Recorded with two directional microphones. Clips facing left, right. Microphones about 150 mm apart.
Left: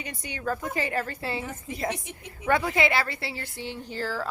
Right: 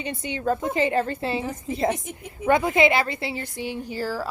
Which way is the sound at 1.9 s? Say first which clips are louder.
Right 6 dB; 50° right (ahead or behind).